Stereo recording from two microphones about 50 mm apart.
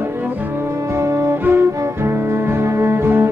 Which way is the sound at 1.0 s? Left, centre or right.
Right.